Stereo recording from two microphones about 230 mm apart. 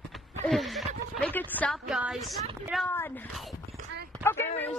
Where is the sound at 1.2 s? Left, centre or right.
Centre.